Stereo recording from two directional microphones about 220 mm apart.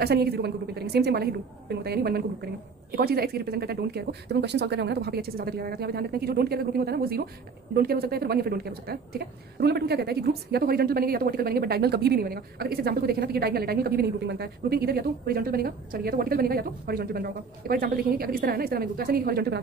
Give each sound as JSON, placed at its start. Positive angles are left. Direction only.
{"t": 0.0, "sound": "speech", "side_deg": -45}